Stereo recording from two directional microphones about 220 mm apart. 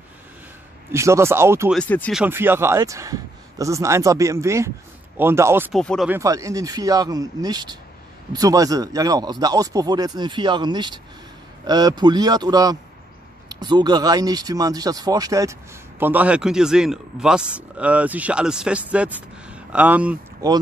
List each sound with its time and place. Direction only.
0.9 s a man's voice: 10° right (ahead or behind)
1.8 s speech: 5° left (ahead or behind)
2.1 s a man's voice: 10° right (ahead or behind)
5.7 s speech: centre (ahead or behind)
6.1 s a man's voice: 15° right (ahead or behind)
19.1 s a sound: 5° right (ahead or behind)
20.4 s a man's voice: 15° right (ahead or behind)